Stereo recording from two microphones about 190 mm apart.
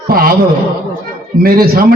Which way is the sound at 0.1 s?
50° right (ahead or behind).